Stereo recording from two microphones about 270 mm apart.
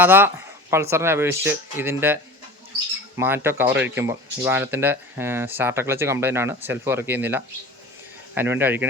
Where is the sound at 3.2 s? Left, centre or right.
Centre.